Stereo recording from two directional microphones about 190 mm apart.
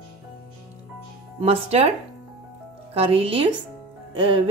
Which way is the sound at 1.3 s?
35° right (ahead or behind).